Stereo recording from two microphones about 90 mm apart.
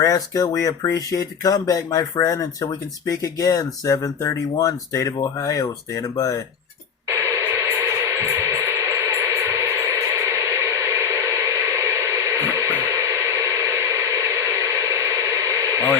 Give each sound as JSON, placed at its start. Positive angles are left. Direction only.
{"t": 0.0, "sound": "speech", "side_deg": 35}
{"t": 7.1, "sound": "music", "side_deg": -35}